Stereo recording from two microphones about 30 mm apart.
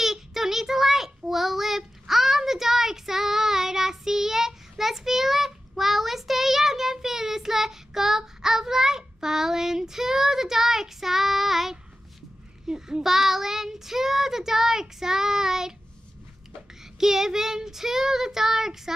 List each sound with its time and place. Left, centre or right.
0.0 s child singing: centre
12.6 s child singing: right
13.0 s child singing: centre
17.0 s child singing: centre